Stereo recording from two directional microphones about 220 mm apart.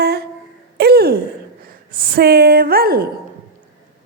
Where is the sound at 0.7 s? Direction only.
45° right (ahead or behind).